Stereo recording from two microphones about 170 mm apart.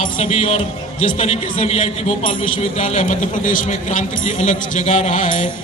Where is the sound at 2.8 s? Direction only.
45° left (ahead or behind).